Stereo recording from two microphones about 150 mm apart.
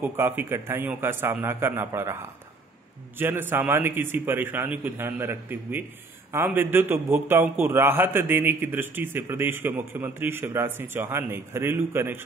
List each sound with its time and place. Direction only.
0.0 s a man's voice: 15° right (ahead or behind)